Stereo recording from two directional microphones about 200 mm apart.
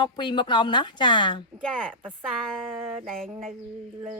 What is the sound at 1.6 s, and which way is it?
Speech, 5° left (ahead or behind).